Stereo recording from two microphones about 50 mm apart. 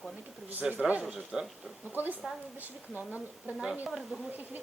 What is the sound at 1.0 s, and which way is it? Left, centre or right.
Speech, centre.